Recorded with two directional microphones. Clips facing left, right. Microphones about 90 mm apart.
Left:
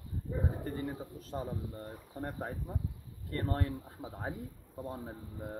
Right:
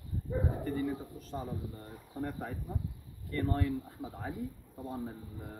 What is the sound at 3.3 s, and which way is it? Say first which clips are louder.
Speech: right 2 dB; 45° left (ahead or behind).